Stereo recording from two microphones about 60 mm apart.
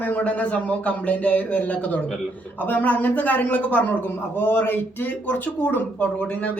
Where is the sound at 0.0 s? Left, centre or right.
Left.